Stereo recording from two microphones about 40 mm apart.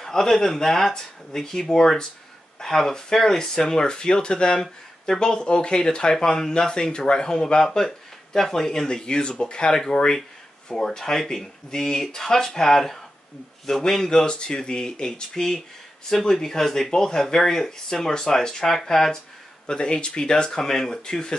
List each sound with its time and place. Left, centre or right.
0.0 s speech: centre
19.6 s speech: centre